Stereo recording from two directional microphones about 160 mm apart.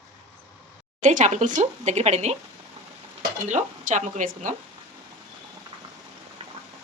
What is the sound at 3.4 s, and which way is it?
Speech, 50° right (ahead or behind).